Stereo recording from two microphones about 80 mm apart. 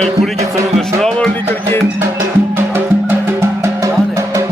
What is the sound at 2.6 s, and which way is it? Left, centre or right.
Music, right.